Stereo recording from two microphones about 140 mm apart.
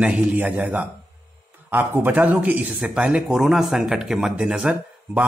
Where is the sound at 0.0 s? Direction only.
10° right (ahead or behind).